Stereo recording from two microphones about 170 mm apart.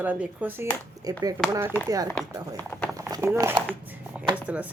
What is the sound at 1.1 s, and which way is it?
Speech, 20° right (ahead or behind).